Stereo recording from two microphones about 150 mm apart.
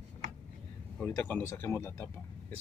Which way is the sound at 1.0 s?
15° left (ahead or behind).